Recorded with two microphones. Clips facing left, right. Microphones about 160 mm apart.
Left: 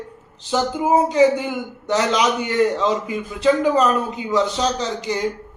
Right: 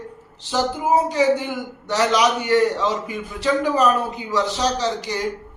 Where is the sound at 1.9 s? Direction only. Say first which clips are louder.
Even; 20° left (ahead or behind).